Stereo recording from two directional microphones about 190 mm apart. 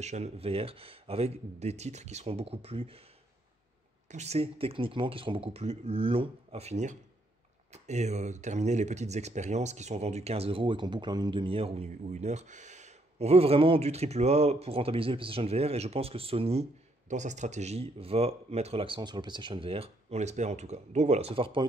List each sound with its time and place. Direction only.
0.0 s speech: 35° right (ahead or behind)
4.1 s speech: 35° right (ahead or behind)